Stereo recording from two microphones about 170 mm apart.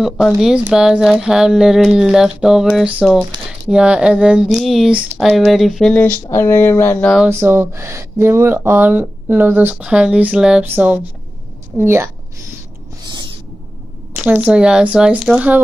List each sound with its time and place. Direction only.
0.4 s speech: 5° right (ahead or behind)
6.3 s speech: 15° left (ahead or behind)
7.2 s speech: 15° right (ahead or behind)
14.1 s speech: 10° right (ahead or behind)